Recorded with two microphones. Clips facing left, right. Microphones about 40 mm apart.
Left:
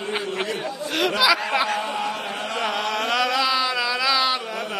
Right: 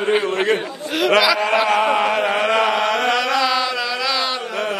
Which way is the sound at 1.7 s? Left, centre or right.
Right.